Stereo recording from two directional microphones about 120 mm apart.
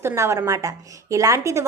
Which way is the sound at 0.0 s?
20° right (ahead or behind).